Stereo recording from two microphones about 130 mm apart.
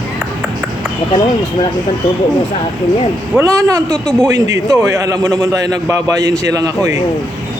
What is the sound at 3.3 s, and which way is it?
A man's voice, 25° right (ahead or behind).